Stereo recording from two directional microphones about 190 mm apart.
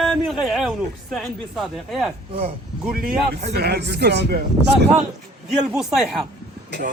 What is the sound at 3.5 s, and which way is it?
Speech, 60° right (ahead or behind).